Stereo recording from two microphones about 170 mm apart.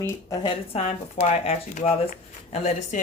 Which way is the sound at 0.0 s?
25° left (ahead or behind).